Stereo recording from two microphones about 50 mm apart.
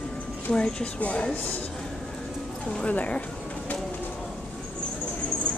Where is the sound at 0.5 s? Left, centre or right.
Left.